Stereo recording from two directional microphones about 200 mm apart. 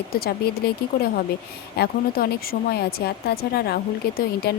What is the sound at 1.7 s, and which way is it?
Speech, 50° left (ahead or behind).